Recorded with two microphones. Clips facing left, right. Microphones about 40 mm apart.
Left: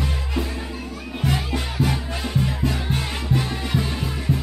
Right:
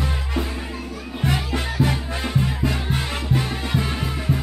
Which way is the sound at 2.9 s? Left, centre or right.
Centre.